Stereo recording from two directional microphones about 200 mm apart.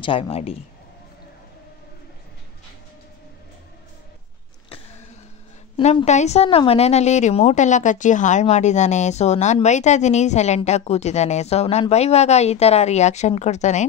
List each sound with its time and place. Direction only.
0.0 s speech: 25° left (ahead or behind)
5.8 s speech: 35° left (ahead or behind)